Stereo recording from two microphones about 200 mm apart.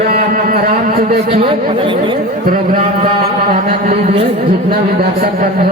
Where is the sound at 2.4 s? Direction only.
45° right (ahead or behind).